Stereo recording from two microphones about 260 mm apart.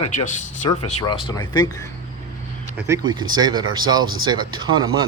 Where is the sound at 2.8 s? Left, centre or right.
Centre.